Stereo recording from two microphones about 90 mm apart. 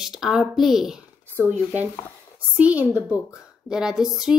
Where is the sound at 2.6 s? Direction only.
15° right (ahead or behind).